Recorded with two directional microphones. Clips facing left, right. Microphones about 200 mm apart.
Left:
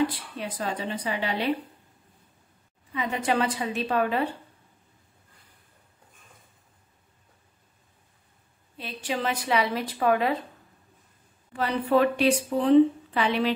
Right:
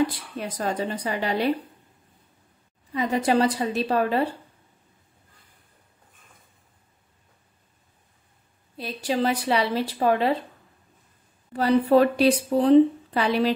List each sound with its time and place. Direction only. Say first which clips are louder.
0.0 s speech: right 2 dB; 45° right (ahead or behind)
2.9 s speech: right 5 dB; 40° right (ahead or behind)
8.7 s speech: right 5 dB; 35° right (ahead or behind)
11.5 s speech: right 5 dB; 35° right (ahead or behind)